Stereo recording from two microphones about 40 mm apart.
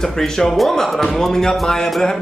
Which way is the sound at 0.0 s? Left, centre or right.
Centre.